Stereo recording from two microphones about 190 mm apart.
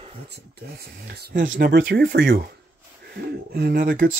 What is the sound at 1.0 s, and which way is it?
Speech, 50° right (ahead or behind).